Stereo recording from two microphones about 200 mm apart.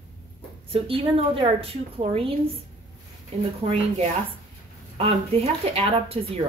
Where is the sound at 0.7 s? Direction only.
30° right (ahead or behind).